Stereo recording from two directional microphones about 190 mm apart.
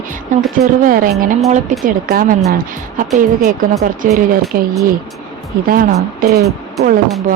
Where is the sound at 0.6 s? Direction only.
45° right (ahead or behind).